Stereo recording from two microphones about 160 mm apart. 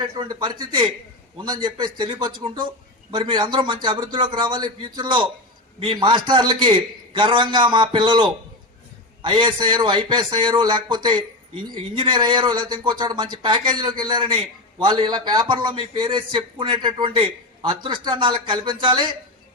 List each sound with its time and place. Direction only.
0.0 s a man's voice: 25° right (ahead or behind)